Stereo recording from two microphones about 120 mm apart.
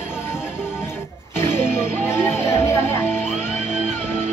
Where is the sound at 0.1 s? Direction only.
20° left (ahead or behind).